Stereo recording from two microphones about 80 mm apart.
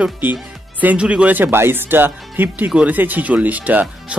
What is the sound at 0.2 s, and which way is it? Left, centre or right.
Speech, right.